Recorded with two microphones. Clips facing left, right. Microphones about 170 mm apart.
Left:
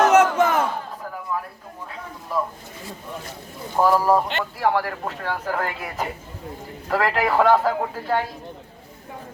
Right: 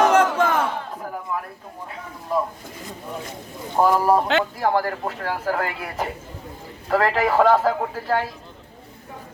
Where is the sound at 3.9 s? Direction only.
15° right (ahead or behind).